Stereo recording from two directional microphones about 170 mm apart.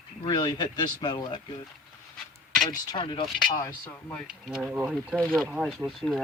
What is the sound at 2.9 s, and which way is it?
Speech, 30° left (ahead or behind).